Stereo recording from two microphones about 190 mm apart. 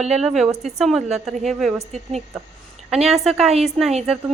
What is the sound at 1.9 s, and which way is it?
Speech, 35° right (ahead or behind).